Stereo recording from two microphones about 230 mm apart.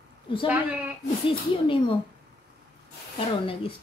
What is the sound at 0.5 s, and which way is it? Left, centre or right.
Speech, centre.